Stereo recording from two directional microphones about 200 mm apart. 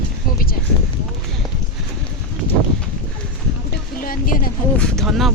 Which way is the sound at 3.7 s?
45° left (ahead or behind).